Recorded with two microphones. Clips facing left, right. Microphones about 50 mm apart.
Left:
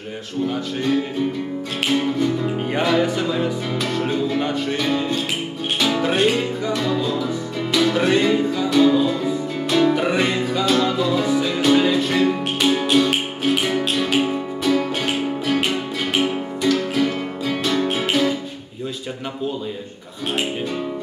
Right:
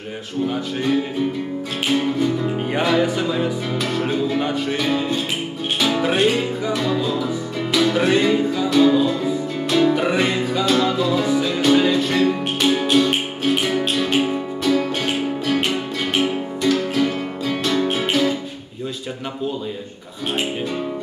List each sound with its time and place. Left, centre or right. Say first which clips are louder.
1.9 s music: right 1 dB; centre